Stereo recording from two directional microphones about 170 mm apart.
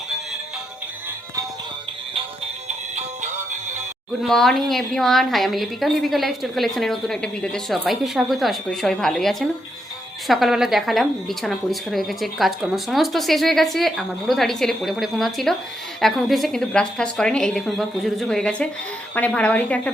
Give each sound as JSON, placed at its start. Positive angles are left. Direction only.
{"t": 2.6, "sound": "music", "side_deg": -45}
{"t": 4.2, "sound": "speech", "side_deg": 0}